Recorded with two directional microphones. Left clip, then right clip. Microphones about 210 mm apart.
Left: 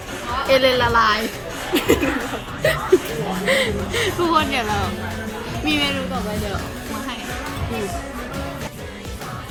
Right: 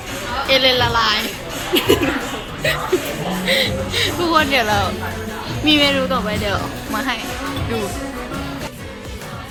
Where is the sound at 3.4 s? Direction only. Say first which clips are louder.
Right 1 dB; 20° left (ahead or behind).